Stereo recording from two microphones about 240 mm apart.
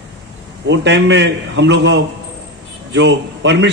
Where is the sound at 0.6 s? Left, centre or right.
Right.